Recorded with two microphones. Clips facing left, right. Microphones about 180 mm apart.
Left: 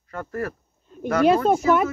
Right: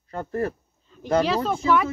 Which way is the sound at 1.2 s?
55° left (ahead or behind).